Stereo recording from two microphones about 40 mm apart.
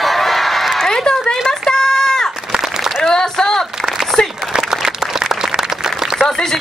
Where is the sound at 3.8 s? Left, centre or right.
Centre.